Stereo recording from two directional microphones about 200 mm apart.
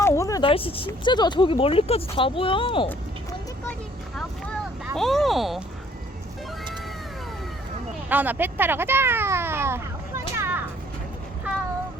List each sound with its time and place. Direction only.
0.0 s speech: 15° left (ahead or behind)
3.7 s vehicle: 5° left (ahead or behind)
4.9 s speech: centre (ahead or behind)
8.1 s speech: 10° right (ahead or behind)
10.3 s children playing: 10° right (ahead or behind)